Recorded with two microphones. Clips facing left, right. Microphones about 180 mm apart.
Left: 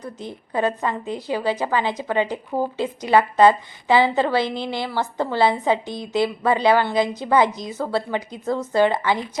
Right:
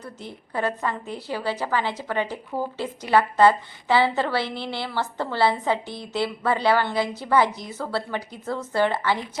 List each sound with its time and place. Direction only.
0.0 s a woman's voice: 15° left (ahead or behind)